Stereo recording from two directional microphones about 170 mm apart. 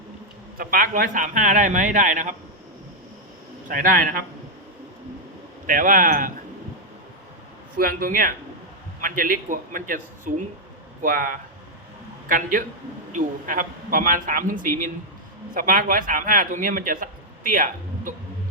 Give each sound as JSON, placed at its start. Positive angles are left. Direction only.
{"t": 0.5, "sound": "a man's voice", "side_deg": -55}
{"t": 3.7, "sound": "a man's voice", "side_deg": -55}
{"t": 5.6, "sound": "a man's voice", "side_deg": -50}
{"t": 7.8, "sound": "a man's voice", "side_deg": -55}